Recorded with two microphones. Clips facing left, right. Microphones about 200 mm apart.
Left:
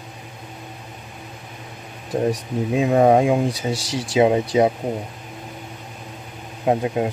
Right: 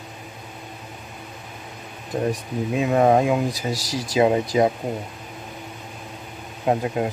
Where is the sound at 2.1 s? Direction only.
35° left (ahead or behind).